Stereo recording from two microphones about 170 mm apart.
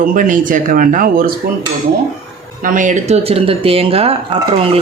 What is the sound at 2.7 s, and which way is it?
Speech, 50° right (ahead or behind).